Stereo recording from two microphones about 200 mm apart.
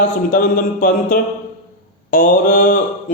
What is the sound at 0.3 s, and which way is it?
A man's voice, 45° left (ahead or behind).